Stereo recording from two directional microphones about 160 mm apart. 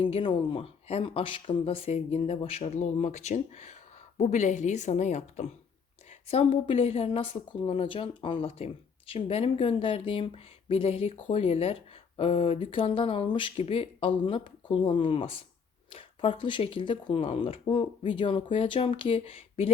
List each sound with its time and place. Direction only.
0.0 s a woman's voice: 30° left (ahead or behind)